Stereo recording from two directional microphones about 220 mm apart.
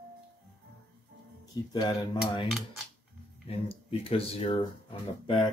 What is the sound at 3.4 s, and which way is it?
Speech, 25° left (ahead or behind).